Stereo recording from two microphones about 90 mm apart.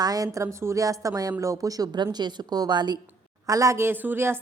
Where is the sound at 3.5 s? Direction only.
35° right (ahead or behind).